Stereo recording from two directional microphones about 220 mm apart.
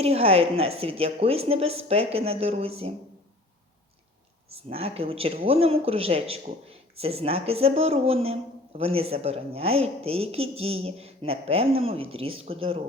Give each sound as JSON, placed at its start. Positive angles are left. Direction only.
{"t": 0.0, "sound": "speech", "side_deg": -25}
{"t": 4.5, "sound": "speech", "side_deg": -25}